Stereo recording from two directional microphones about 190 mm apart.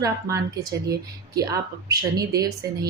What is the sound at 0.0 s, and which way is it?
A woman's voice, 15° right (ahead or behind).